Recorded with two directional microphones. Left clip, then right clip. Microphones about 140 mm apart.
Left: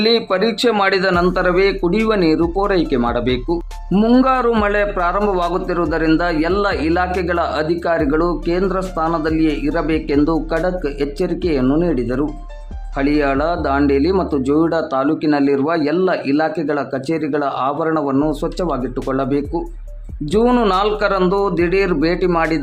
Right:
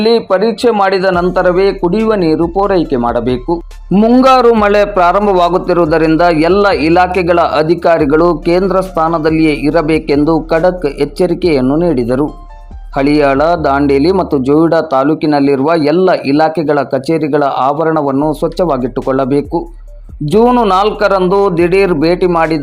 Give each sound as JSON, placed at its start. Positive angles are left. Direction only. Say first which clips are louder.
{"t": 0.0, "sound": "speech", "louder": "right 5 dB", "side_deg": -20}
{"t": 4.2, "sound": "a man's voice", "louder": "right 12 dB", "side_deg": -35}
{"t": 20.7, "sound": "speech", "louder": "right 6 dB", "side_deg": -25}